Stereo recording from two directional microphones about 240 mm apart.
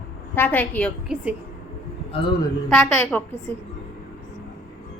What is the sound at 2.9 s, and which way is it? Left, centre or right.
Speech, centre.